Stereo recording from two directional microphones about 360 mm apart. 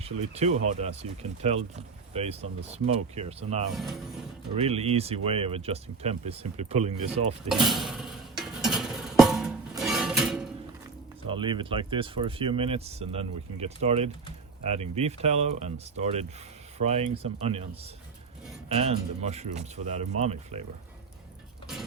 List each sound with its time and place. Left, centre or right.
0.3 s speech: centre
3.8 s speech: centre
4.5 s speech: centre
7.4 s a sound: centre
11.3 s speech: centre